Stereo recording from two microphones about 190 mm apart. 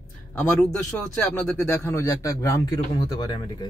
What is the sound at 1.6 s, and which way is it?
A man's voice, 15° left (ahead or behind).